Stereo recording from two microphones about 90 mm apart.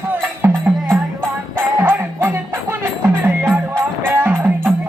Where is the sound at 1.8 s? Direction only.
25° right (ahead or behind).